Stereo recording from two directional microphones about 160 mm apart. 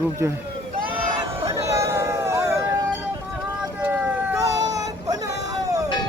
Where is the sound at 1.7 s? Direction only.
15° right (ahead or behind).